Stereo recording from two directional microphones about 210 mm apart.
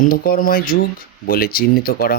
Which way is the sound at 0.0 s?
45° left (ahead or behind).